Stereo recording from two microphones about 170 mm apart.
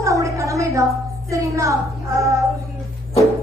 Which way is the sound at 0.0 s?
20° right (ahead or behind).